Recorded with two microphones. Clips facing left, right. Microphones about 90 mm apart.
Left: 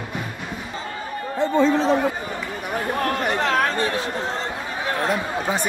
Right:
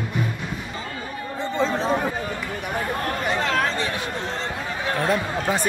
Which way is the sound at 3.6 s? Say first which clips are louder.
Left 3 dB; 55° left (ahead or behind).